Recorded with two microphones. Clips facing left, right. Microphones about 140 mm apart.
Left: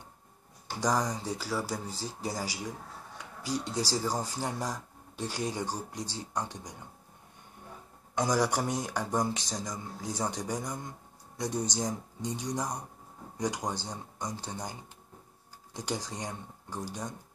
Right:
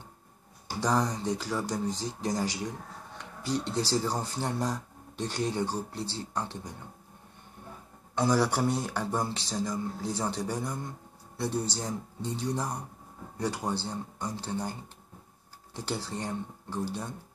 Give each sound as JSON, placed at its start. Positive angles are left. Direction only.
{"t": 0.7, "sound": "speech", "side_deg": 10}
{"t": 8.1, "sound": "speech", "side_deg": 15}